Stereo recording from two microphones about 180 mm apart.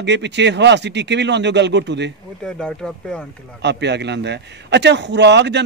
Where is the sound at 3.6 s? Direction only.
70° right (ahead or behind).